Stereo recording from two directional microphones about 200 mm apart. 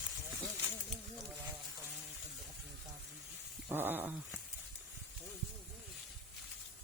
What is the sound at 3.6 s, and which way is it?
Cat, 10° right (ahead or behind).